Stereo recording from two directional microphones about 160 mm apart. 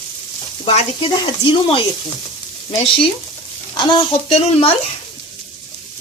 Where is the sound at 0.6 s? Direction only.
40° left (ahead or behind).